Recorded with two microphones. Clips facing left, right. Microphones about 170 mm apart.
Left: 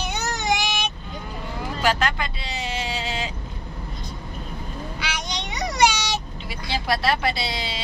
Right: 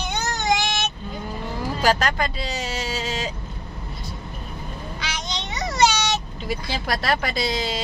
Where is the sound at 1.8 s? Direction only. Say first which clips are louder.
Right 2 dB; 40° right (ahead or behind).